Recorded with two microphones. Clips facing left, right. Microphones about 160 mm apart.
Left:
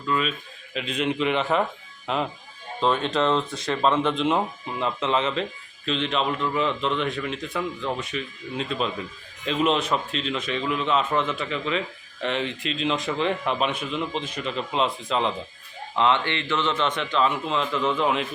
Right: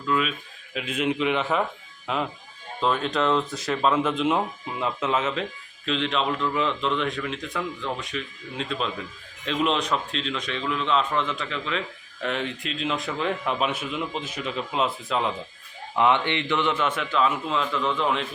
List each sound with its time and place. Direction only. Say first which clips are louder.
0.1 s speech: even; 5° right (ahead or behind)
16.0 s speech: right 1 dB; 15° right (ahead or behind); by 18.3 s 5° left (ahead or behind)